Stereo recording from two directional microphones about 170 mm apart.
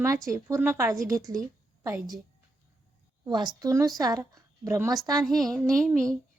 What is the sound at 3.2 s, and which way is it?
A woman's voice, 25° right (ahead or behind).